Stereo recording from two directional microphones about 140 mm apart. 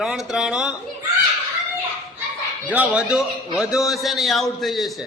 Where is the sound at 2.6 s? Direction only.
10° right (ahead or behind).